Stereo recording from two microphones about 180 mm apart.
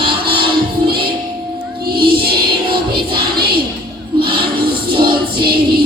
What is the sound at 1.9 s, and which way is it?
Music, 60° right (ahead or behind).